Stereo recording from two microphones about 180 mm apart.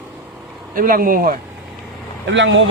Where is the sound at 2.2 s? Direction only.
90° right.